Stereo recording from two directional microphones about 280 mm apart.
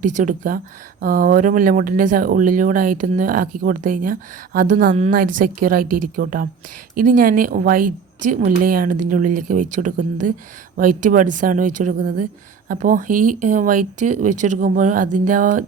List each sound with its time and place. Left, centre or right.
0.0 s speech: right